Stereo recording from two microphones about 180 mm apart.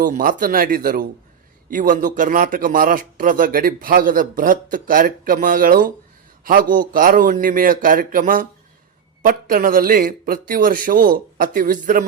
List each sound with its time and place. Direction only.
0.0 s speech: 50° right (ahead or behind)